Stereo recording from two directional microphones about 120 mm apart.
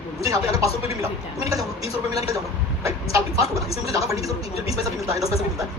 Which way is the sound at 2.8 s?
25° right (ahead or behind).